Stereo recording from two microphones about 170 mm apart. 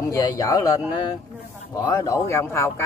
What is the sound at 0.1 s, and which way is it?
Speech, 20° left (ahead or behind).